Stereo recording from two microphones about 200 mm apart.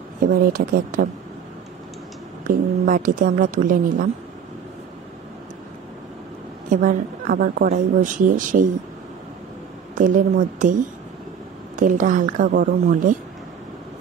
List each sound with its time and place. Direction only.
0.3 s a woman's voice: 45° right (ahead or behind)
2.4 s a woman's voice: 45° right (ahead or behind)
6.7 s a woman's voice: 40° right (ahead or behind)
9.9 s a woman's voice: 40° right (ahead or behind)